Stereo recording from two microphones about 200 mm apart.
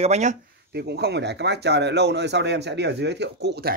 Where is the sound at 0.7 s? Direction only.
55° right (ahead or behind).